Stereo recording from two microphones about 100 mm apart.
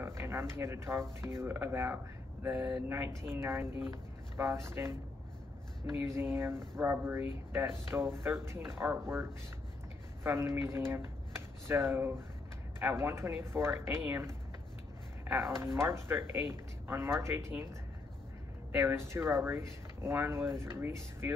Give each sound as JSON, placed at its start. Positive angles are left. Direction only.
{"t": 0.0, "sound": "speech", "side_deg": -25}
{"t": 5.9, "sound": "speech", "side_deg": -25}
{"t": 15.8, "sound": "speech", "side_deg": -25}
{"t": 18.8, "sound": "speech", "side_deg": -25}